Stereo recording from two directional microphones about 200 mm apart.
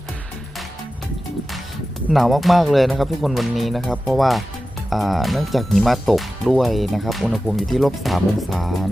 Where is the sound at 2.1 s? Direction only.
Centre (ahead or behind).